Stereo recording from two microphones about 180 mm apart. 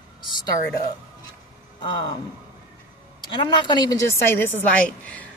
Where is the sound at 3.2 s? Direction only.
25° left (ahead or behind); by 5.3 s 10° left (ahead or behind).